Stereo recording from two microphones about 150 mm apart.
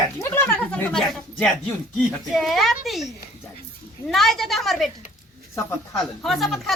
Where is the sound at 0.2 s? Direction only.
15° left (ahead or behind).